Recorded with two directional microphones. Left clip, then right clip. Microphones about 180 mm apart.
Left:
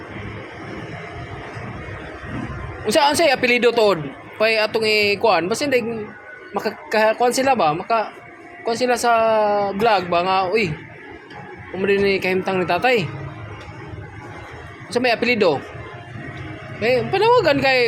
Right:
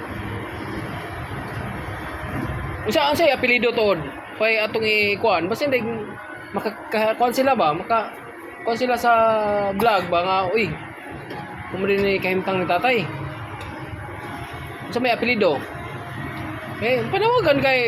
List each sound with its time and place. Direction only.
2.8 s speech: 45° left (ahead or behind)
11.8 s speech: 45° left (ahead or behind)
14.9 s speech: 45° left (ahead or behind)
16.8 s speech: 40° left (ahead or behind)